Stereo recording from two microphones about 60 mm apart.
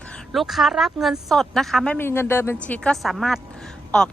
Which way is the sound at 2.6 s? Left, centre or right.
Left.